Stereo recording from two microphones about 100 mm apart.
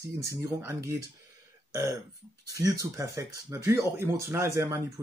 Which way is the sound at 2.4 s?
35° right (ahead or behind).